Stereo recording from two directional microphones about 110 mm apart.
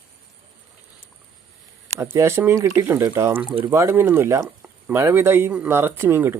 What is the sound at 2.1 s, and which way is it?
Speech, 25° right (ahead or behind).